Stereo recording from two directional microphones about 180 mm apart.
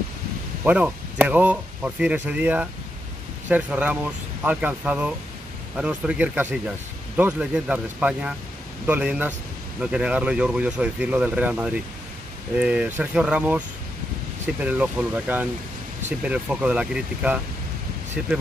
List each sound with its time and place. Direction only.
0.7 s speech: 10° right (ahead or behind)